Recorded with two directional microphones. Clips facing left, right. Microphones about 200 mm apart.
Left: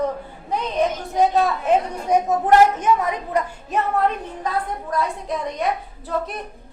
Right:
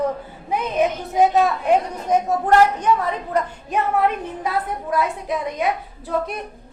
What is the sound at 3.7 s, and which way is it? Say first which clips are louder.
A woman's voice: right 1 dB; 5° right (ahead or behind).